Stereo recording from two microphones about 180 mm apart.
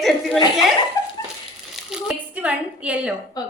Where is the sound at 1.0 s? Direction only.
20° left (ahead or behind).